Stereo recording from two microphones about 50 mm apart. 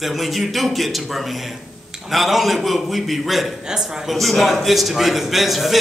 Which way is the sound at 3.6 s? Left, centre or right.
Centre.